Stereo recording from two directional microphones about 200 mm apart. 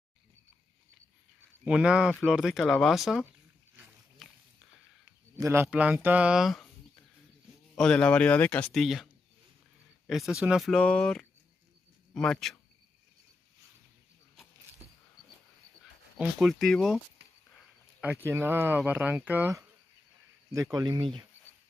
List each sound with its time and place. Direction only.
1.6 s speech: 5° right (ahead or behind)
5.4 s speech: 10° right (ahead or behind)
7.7 s speech: 5° left (ahead or behind)
16.2 s speech: 5° right (ahead or behind)
18.0 s speech: 10° right (ahead or behind)
20.7 s speech: 20° right (ahead or behind)